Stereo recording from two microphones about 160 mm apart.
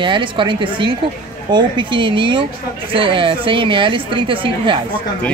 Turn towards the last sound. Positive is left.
turn(degrees=-35)  # may be behind; listen again after turning